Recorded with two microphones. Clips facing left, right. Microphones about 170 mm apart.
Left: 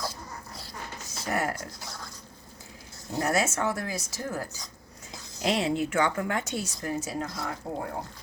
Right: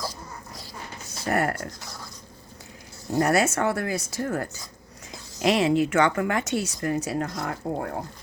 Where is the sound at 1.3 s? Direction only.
60° right (ahead or behind).